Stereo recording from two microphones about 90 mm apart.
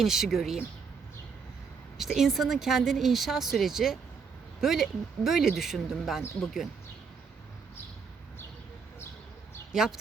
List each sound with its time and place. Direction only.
0.0 s speech: 5° right (ahead or behind)
2.0 s speech: centre (ahead or behind)
9.7 s speech: 5° right (ahead or behind)